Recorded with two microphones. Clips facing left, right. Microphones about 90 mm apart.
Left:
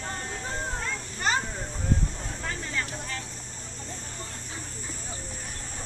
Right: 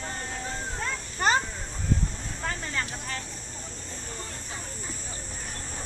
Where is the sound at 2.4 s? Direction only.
50° right (ahead or behind).